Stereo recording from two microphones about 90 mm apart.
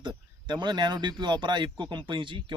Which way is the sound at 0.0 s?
55° right (ahead or behind).